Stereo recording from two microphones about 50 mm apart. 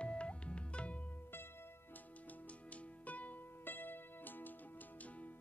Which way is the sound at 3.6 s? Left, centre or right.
Left.